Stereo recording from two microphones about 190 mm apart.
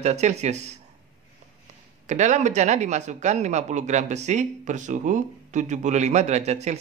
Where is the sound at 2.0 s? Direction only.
40° right (ahead or behind).